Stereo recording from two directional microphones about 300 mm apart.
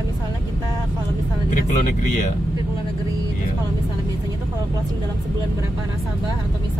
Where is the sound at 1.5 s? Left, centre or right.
Left.